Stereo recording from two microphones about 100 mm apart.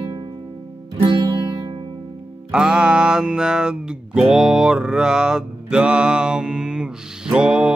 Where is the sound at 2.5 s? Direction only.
10° right (ahead or behind).